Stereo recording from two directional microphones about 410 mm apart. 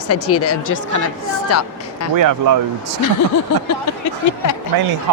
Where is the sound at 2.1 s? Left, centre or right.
Right.